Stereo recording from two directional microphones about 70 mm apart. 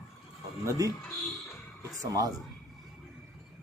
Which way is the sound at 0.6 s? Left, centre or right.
Right.